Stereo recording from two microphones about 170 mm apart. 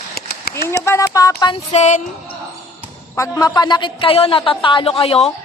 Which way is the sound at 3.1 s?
15° left (ahead or behind).